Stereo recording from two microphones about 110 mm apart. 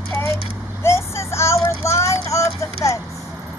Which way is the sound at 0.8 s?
25° left (ahead or behind).